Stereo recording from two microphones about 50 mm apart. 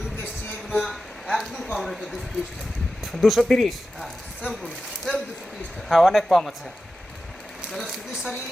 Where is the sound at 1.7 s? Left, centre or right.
Centre.